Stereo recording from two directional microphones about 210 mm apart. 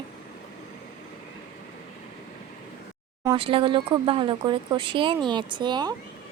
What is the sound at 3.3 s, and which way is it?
Speech, 25° right (ahead or behind).